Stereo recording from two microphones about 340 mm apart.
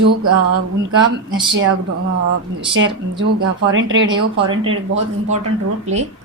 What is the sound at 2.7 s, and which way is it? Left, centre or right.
A woman's voice, right.